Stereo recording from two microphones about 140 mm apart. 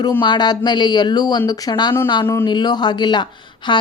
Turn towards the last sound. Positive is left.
turn(degrees=35)  # may be behind; listen again after turning